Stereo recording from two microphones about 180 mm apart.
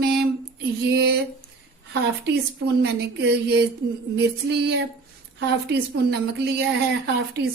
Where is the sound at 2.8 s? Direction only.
65° right (ahead or behind).